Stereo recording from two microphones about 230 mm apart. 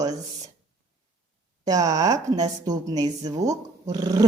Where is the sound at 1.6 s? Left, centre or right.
Centre.